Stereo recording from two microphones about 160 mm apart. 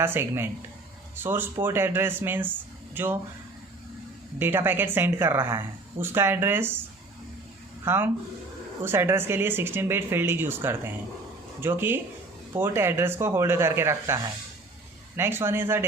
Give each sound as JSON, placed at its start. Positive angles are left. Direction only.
{"t": 0.0, "sound": "speech", "side_deg": -15}
{"t": 4.4, "sound": "speech", "side_deg": -15}
{"t": 7.9, "sound": "speech", "side_deg": -15}